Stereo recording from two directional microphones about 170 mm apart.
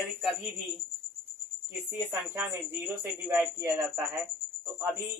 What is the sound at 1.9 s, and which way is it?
Speech, 15° right (ahead or behind).